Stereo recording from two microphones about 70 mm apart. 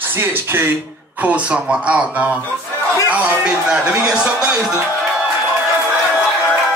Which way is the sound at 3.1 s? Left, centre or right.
Right.